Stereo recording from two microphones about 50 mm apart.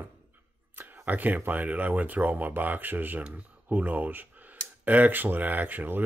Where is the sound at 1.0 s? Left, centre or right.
Right.